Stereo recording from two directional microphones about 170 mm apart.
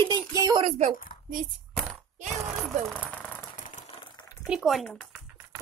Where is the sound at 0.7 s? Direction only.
40° right (ahead or behind).